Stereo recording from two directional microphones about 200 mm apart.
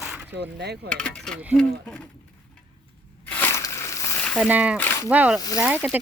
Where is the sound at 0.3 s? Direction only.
55° right (ahead or behind).